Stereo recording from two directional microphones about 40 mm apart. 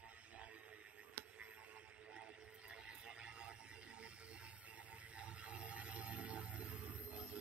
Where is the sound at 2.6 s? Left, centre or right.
Right.